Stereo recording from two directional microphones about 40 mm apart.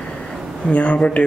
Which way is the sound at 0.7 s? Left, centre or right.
Left.